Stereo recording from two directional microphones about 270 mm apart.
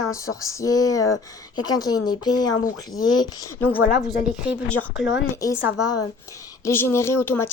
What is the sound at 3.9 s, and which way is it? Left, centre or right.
A woman's voice, centre.